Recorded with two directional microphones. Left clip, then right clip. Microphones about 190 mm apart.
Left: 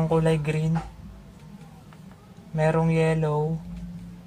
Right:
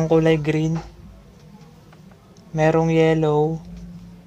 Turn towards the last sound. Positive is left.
turn(degrees=-50)  # may be behind; listen again after turning